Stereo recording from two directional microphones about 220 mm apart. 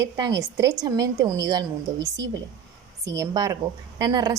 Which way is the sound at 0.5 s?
15° right (ahead or behind).